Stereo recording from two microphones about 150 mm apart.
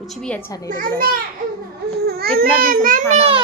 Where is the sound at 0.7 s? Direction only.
70° right (ahead or behind).